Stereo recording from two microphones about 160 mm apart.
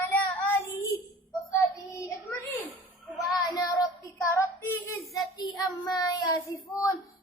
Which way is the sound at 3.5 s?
25° left (ahead or behind).